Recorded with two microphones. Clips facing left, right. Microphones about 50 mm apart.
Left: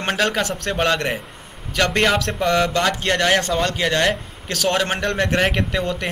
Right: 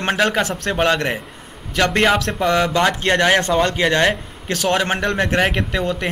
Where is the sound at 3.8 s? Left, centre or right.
Centre.